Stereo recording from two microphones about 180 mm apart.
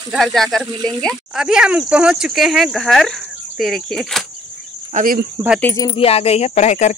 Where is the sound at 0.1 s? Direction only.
Centre (ahead or behind).